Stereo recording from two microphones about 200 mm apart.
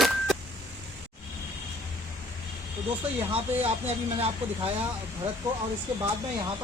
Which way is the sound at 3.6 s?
30° right (ahead or behind).